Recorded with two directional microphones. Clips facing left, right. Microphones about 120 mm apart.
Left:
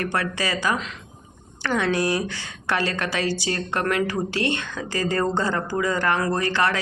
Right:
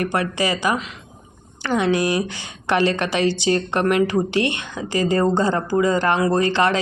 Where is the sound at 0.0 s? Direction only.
15° right (ahead or behind).